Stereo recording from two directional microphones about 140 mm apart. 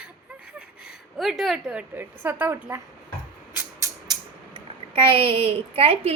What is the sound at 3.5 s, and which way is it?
Music, 15° right (ahead or behind).